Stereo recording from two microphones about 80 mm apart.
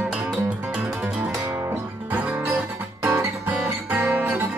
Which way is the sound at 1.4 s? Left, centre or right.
Right.